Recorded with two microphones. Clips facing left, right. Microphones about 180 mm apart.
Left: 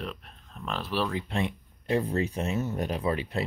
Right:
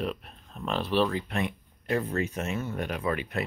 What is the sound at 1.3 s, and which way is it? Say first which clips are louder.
Speech: left 1 dB; 25° left (ahead or behind).